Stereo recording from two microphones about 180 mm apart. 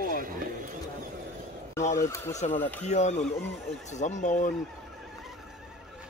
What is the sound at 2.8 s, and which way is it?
Speech, 40° left (ahead or behind).